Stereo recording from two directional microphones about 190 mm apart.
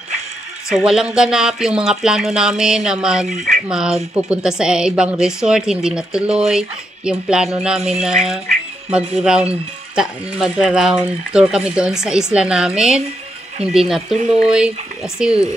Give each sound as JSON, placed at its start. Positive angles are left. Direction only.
{"t": 0.7, "sound": "speech", "side_deg": 0}
{"t": 14.1, "sound": "speech", "side_deg": -35}
{"t": 14.4, "sound": "speech", "side_deg": -5}